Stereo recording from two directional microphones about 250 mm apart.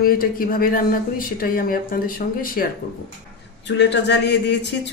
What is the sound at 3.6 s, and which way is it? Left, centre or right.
Speech, left.